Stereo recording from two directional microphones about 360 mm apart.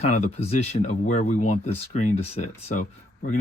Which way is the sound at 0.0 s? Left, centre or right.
Centre.